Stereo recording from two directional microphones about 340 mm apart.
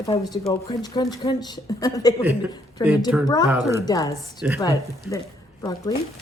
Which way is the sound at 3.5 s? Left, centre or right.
Centre.